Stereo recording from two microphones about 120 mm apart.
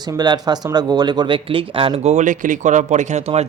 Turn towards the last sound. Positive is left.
turn(degrees=-65)  # may be behind; listen again after turning